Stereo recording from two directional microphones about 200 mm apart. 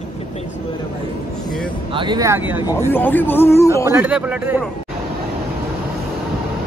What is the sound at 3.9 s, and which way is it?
Speech, 10° right (ahead or behind).